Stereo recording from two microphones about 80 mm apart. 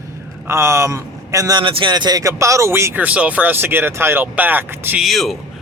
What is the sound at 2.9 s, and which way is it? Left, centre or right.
Speech, centre.